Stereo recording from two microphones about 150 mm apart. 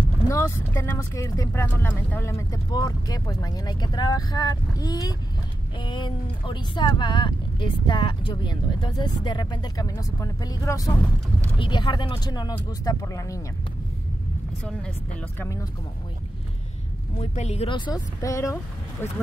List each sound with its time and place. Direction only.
0.7 s speech: 20° left (ahead or behind)
11.5 s speech: 30° left (ahead or behind)
14.6 s speech: 5° left (ahead or behind)
17.2 s speech: 45° left (ahead or behind)
17.6 s speech: 30° left (ahead or behind)